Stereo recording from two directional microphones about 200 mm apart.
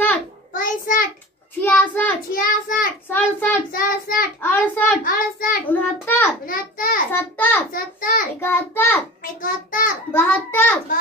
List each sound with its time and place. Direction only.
0.5 s child singing: 45° left (ahead or behind)
1.6 s a child's voice: 10° left (ahead or behind)
2.3 s child singing: 45° left (ahead or behind)
3.1 s a child's voice: 10° left (ahead or behind)
3.7 s child singing: 45° left (ahead or behind)
4.4 s a child's voice: 10° left (ahead or behind)
5.0 s child singing: 45° left (ahead or behind)
5.7 s a child's voice: 10° left (ahead or behind)
6.4 s child singing: 45° left (ahead or behind)
7.1 s a child's voice: 10° left (ahead or behind)
7.7 s a child's voice: 45° left (ahead or behind)
8.4 s a child's voice: 10° left (ahead or behind)
9.2 s a child's voice: 45° left (ahead or behind)
10.1 s a child's voice: 10° left (ahead or behind)